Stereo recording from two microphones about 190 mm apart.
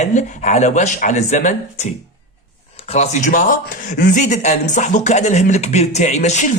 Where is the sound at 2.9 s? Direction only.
35° left (ahead or behind).